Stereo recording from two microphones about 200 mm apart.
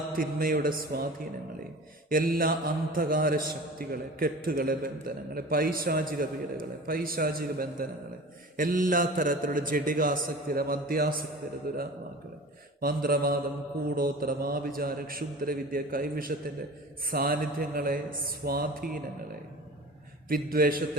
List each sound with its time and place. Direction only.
0.2 s speech: 45° right (ahead or behind)
2.0 s speech: 45° right (ahead or behind)
20.2 s speech: 45° right (ahead or behind)